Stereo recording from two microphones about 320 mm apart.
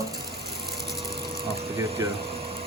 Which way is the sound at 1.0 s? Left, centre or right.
Centre.